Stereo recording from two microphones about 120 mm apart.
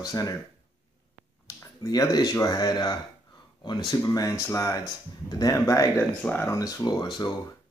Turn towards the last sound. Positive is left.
turn(degrees=35)  # may be behind; listen again after turning